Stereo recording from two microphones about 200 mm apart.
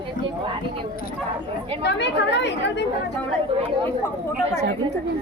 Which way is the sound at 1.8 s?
60° left (ahead or behind).